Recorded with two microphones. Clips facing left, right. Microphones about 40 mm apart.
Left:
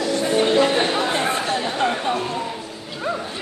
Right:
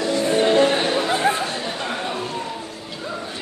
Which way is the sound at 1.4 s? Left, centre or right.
Left.